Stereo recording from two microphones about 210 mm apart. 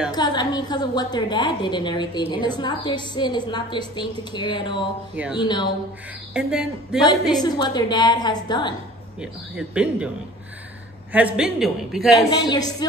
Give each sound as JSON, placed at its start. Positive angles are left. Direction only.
{"t": 0.1, "sound": "a woman's voice", "side_deg": 20}
{"t": 6.3, "sound": "a man's voice", "side_deg": 0}
{"t": 7.4, "sound": "a woman's voice", "side_deg": 20}
{"t": 9.2, "sound": "a man's voice", "side_deg": -5}
{"t": 11.1, "sound": "a man's voice", "side_deg": -5}
{"t": 12.3, "sound": "a woman's voice", "side_deg": 20}